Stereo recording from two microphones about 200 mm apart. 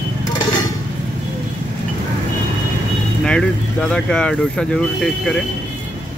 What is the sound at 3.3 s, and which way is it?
Speech, 5° left (ahead or behind).